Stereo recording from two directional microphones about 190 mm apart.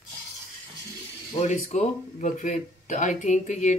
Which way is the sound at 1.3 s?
40° left (ahead or behind).